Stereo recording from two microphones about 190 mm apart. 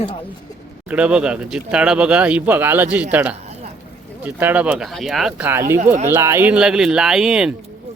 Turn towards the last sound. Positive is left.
turn(degrees=-5)  # may be behind; listen again after turning